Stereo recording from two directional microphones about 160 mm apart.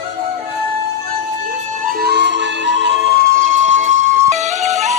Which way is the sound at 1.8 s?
65° right (ahead or behind).